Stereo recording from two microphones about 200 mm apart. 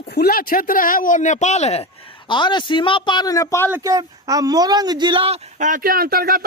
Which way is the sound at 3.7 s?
15° right (ahead or behind).